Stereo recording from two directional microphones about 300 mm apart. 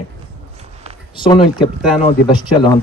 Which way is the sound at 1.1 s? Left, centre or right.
Centre.